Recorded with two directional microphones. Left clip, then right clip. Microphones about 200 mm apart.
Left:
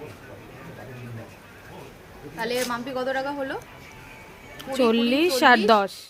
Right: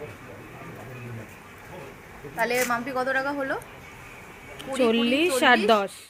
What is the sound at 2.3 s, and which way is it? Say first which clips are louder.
A woman's voice: right 3 dB; 5° right (ahead or behind).